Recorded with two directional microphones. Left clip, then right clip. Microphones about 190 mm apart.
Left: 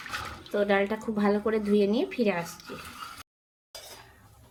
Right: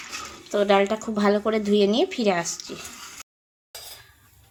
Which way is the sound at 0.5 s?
30° right (ahead or behind).